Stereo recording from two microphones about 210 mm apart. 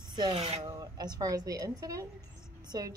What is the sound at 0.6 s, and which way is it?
A woman's voice, 15° right (ahead or behind).